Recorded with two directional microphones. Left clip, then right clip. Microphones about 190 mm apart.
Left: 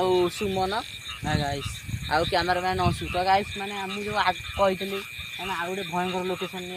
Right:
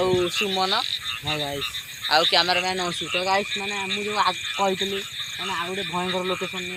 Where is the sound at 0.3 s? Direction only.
55° left (ahead or behind).